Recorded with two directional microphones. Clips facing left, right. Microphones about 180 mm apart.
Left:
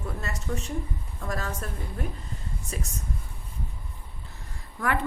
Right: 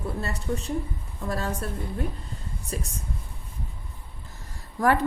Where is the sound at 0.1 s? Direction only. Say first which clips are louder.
Right 3 dB; 35° right (ahead or behind).